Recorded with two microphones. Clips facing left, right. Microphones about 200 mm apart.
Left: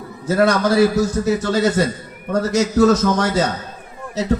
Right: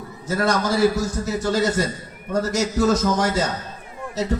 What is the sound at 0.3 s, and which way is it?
A man's voice, 60° left (ahead or behind).